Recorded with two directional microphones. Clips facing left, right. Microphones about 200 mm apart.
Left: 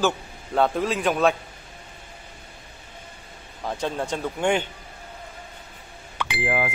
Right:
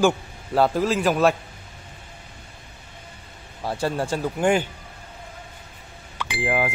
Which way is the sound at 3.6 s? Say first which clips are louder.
Right 2 dB; 10° right (ahead or behind).